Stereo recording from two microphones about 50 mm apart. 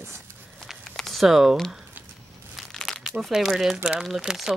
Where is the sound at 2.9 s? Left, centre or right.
Centre.